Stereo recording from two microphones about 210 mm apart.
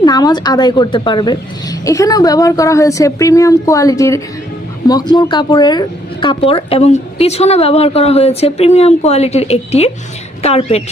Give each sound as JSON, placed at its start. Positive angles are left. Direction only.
{"t": 0.0, "sound": "speech", "side_deg": 20}